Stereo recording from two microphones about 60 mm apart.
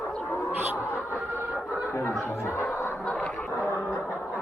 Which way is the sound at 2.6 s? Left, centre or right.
Left.